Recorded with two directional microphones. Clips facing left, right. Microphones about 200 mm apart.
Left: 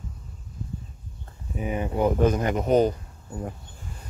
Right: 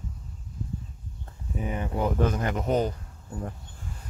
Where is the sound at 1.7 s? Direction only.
15° left (ahead or behind).